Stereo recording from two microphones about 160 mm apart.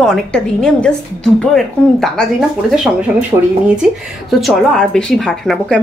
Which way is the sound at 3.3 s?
20° right (ahead or behind).